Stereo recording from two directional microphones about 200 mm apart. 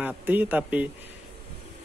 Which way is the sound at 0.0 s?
10° right (ahead or behind).